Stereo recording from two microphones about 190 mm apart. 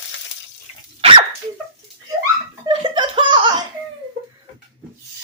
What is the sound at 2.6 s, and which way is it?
Laughter, 25° right (ahead or behind).